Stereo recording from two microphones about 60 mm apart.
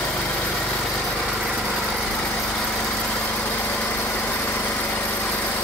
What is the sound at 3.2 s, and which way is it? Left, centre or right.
Vehicle, left.